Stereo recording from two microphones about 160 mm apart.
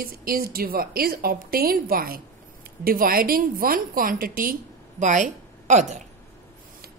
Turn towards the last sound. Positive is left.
turn(degrees=-50)  # may be behind; listen again after turning